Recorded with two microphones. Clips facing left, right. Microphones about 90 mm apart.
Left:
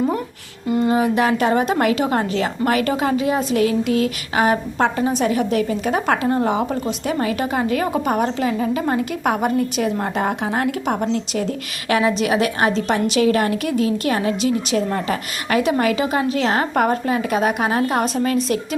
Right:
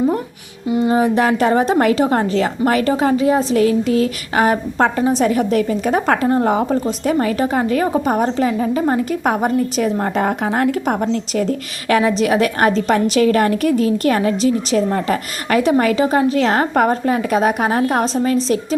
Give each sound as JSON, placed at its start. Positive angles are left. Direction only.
{"t": 0.9, "sound": "a woman's voice", "side_deg": -35}